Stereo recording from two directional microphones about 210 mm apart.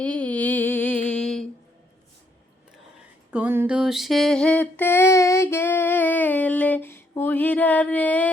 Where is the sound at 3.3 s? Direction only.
10° right (ahead or behind).